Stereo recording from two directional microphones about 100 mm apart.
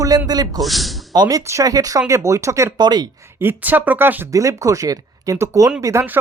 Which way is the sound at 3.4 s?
20° right (ahead or behind).